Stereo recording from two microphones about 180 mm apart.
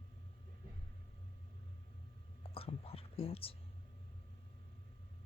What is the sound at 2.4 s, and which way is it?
Whispering, 30° left (ahead or behind).